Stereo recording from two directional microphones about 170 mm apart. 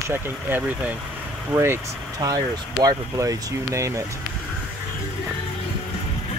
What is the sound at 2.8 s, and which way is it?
Speech, 20° right (ahead or behind).